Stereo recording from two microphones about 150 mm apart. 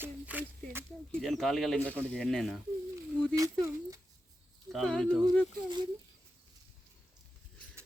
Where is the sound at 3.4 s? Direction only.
20° right (ahead or behind).